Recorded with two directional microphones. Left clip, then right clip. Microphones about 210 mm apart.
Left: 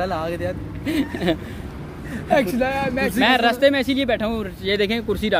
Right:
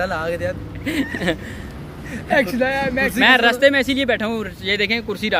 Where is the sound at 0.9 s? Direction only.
10° right (ahead or behind).